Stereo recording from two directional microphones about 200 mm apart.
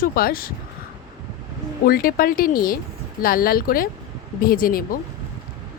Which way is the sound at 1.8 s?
45° left (ahead or behind).